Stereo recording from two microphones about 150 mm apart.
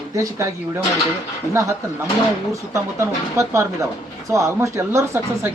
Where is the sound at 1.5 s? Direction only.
20° right (ahead or behind).